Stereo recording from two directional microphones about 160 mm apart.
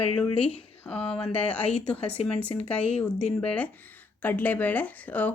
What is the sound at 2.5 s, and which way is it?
Speech, 35° left (ahead or behind).